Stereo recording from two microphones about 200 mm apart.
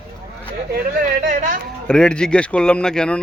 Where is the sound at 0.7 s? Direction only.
50° right (ahead or behind).